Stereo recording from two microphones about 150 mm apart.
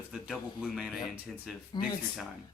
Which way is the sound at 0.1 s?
Centre (ahead or behind).